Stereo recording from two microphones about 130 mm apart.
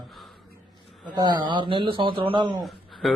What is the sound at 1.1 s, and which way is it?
A man's voice, 35° right (ahead or behind).